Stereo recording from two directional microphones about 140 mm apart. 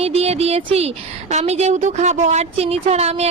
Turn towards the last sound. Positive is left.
turn(degrees=-50)  # may be behind; listen again after turning